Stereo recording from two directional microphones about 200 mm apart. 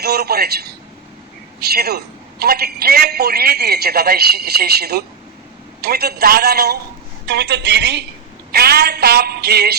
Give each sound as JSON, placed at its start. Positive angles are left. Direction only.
{"t": 0.0, "sound": "a woman's voice", "side_deg": -55}